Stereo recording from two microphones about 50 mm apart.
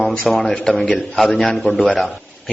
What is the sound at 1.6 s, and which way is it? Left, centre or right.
Speech, left.